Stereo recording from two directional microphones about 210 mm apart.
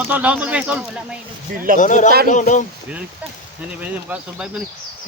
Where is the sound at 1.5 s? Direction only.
40° right (ahead or behind).